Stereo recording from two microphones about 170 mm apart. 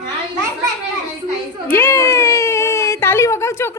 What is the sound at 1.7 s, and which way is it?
Baby cry, 15° left (ahead or behind).